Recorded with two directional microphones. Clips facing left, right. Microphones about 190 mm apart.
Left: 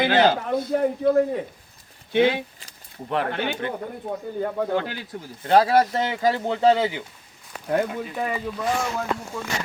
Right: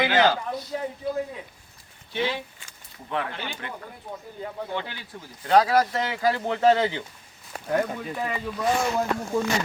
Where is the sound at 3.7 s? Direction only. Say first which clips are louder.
Left 8 dB; 55° left (ahead or behind).